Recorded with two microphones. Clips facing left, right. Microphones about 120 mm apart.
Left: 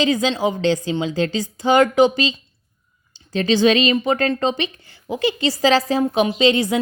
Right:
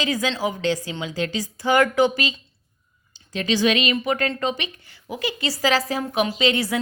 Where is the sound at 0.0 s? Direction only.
25° left (ahead or behind).